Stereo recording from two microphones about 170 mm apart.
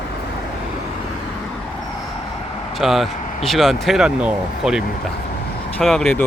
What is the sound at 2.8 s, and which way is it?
Speech, centre (ahead or behind).